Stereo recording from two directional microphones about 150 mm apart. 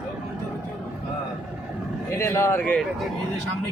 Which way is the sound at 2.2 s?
15° left (ahead or behind).